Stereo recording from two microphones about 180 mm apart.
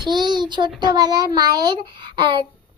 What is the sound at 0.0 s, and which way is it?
A child's voice, 25° right (ahead or behind).